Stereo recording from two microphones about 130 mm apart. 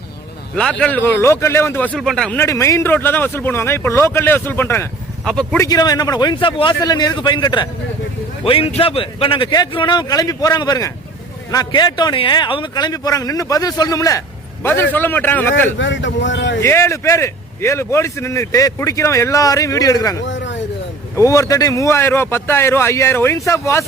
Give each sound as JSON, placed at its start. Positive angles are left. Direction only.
{"t": 0.5, "sound": "speech", "side_deg": 5}
{"t": 2.0, "sound": "speech", "side_deg": 5}
{"t": 2.4, "sound": "speech", "side_deg": 25}
{"t": 5.2, "sound": "speech", "side_deg": 5}
{"t": 5.5, "sound": "speech", "side_deg": 30}
{"t": 8.4, "sound": "a man's voice", "side_deg": 45}